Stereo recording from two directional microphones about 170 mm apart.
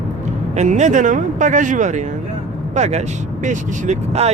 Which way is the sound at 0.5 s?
45° right (ahead or behind).